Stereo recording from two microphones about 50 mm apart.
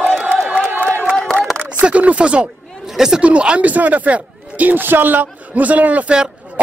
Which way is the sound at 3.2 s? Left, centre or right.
Right.